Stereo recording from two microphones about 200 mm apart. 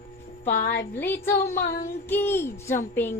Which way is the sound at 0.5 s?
55° left (ahead or behind).